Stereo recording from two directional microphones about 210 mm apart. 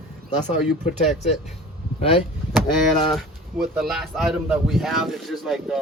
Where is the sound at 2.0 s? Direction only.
25° left (ahead or behind).